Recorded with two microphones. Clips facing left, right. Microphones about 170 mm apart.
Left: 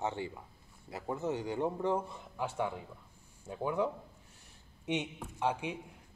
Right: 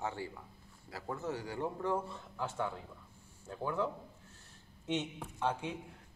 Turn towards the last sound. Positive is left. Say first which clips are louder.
# left 2 dB
turn(degrees=15)  # may be behind; listen again after turning